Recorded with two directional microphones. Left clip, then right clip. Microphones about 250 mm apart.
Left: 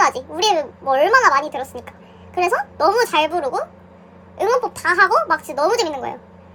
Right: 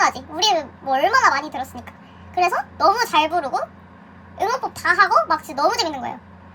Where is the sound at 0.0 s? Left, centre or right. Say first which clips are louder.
Left 2 dB; centre.